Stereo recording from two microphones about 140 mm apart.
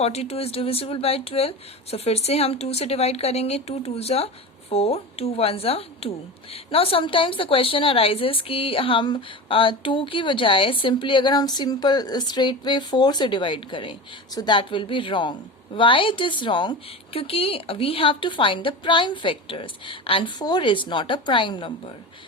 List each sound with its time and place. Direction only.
0.0 s a woman's voice: 50° left (ahead or behind)